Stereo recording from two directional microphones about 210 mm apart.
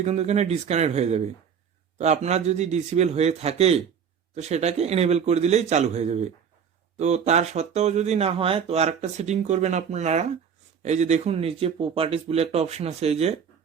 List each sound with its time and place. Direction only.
0.0 s speech: 30° right (ahead or behind)